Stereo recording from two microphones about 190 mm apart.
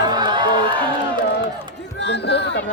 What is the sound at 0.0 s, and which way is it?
Music, 20° right (ahead or behind).